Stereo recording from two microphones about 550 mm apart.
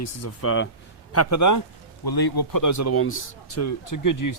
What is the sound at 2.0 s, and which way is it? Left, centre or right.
A man's voice, left.